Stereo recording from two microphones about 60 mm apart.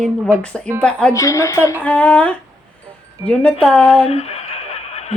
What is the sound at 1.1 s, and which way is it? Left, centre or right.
Speech, left.